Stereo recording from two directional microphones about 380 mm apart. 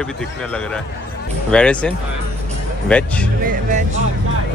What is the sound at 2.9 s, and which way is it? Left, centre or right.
Speech, centre.